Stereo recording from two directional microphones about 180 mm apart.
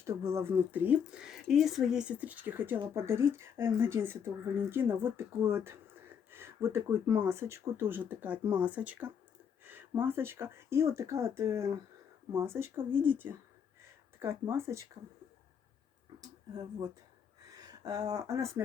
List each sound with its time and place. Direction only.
0.0 s speech: 15° right (ahead or behind)
16.2 s speech: 20° right (ahead or behind)